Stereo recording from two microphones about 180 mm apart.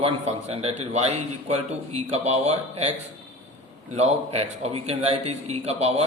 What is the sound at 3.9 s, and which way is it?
A man's voice, 35° right (ahead or behind).